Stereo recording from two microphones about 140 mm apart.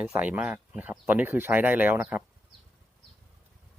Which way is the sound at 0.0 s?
10° right (ahead or behind).